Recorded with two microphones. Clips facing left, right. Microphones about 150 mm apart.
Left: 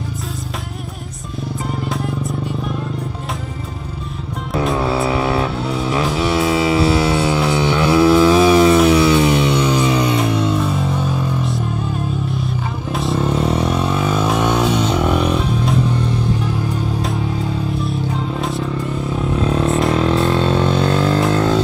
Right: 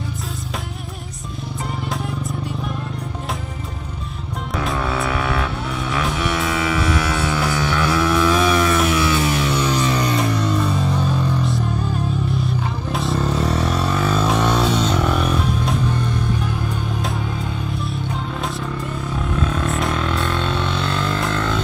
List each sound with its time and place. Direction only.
1.9 s music: centre (ahead or behind)
4.7 s vehicle: 25° left (ahead or behind)
6.1 s mains hum: 30° left (ahead or behind)
9.8 s music: 5° left (ahead or behind)
13.3 s a sound: 25° left (ahead or behind)
13.7 s music: 5° left (ahead or behind)
19.3 s a sound: 30° left (ahead or behind)